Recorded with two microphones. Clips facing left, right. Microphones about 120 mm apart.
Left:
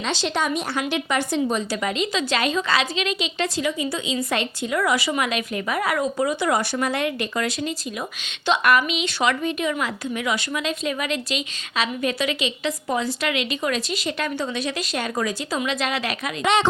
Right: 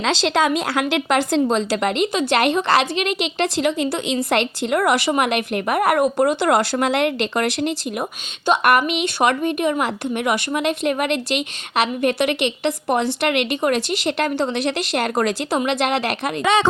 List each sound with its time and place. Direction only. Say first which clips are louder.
0.0 s a woman's voice: right 6 dB; 90° right; by 7.7 s 70° right (ahead or behind)
8.4 s a woman's voice: right 3 dB; 60° right (ahead or behind)